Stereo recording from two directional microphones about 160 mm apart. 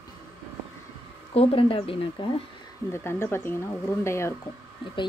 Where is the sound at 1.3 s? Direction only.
35° left (ahead or behind).